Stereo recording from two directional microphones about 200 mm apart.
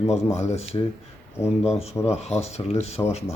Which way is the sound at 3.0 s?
15° left (ahead or behind).